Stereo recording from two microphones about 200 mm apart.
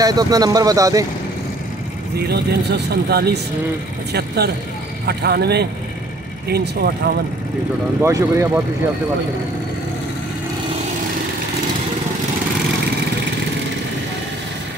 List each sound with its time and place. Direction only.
0.0 s speech: 20° right (ahead or behind)
2.1 s speech: 55° right (ahead or behind)
5.0 s speech: 55° right (ahead or behind)
8.0 s speech: 15° right (ahead or behind)